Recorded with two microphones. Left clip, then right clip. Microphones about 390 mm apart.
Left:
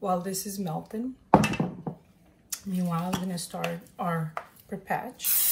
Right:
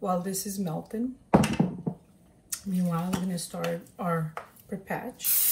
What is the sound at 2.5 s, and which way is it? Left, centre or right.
Speech, centre.